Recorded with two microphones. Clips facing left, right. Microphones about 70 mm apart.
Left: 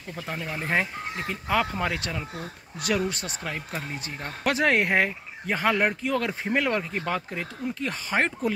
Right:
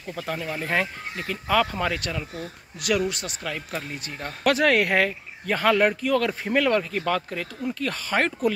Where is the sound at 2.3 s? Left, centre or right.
Left.